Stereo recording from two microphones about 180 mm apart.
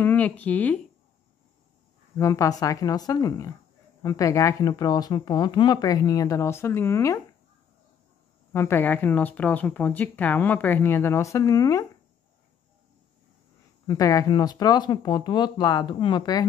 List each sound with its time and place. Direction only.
0.0 s speech: 10° left (ahead or behind)
2.1 s speech: 15° left (ahead or behind)
8.5 s speech: 10° left (ahead or behind)
13.8 s speech: 20° left (ahead or behind)